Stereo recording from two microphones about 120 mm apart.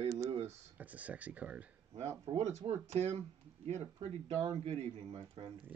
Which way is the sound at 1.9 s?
60° right (ahead or behind).